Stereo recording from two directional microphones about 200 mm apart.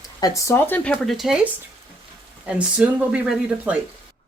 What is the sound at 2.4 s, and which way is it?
Speech, 5° right (ahead or behind).